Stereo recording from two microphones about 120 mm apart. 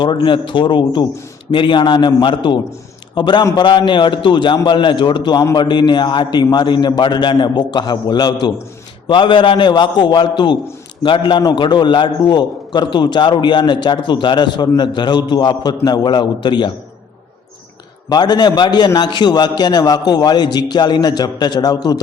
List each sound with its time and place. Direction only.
0.0 s a man's voice: 40° left (ahead or behind)
18.1 s a man's voice: 35° left (ahead or behind)